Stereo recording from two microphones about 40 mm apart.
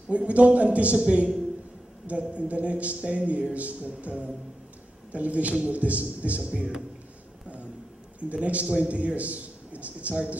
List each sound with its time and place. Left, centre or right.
0.1 s a man's voice: right
8.3 s a man's voice: right